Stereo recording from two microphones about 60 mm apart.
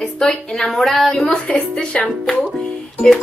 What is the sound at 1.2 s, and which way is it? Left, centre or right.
Speech, centre.